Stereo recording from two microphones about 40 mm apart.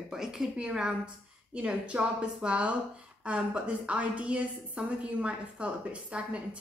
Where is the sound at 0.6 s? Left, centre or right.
Right.